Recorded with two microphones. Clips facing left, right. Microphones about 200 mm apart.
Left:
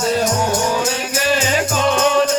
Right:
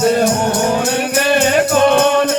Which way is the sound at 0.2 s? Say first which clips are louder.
Right 3 dB; 55° right (ahead or behind).